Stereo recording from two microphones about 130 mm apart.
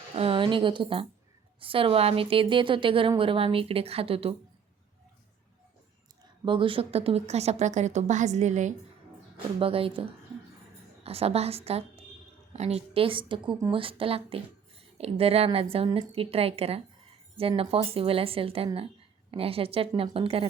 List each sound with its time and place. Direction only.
0.2 s a woman's voice: 40° right (ahead or behind)
6.4 s a woman's voice: 40° right (ahead or behind); by 8.7 s 65° right (ahead or behind)
9.6 s a woman's voice: 45° right (ahead or behind)
11.0 s a woman's voice: 50° right (ahead or behind)